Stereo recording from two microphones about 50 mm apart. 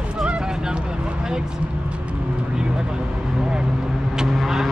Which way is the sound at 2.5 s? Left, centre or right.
Centre.